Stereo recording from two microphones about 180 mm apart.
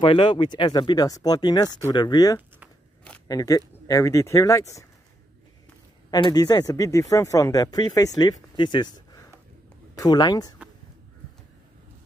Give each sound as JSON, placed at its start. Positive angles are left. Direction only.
{"t": 0.0, "sound": "speech", "side_deg": 25}
{"t": 6.0, "sound": "speech", "side_deg": 20}